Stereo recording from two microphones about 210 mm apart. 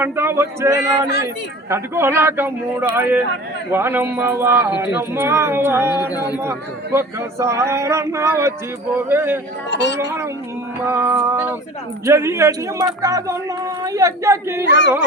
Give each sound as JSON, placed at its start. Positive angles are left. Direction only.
{"t": 0.0, "sound": "speech", "side_deg": -10}
{"t": 9.6, "sound": "speech", "side_deg": 55}
{"t": 10.8, "sound": "speech", "side_deg": -10}